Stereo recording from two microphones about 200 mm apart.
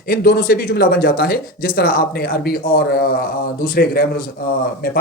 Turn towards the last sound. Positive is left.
turn(degrees=45)  # may be behind; listen again after turning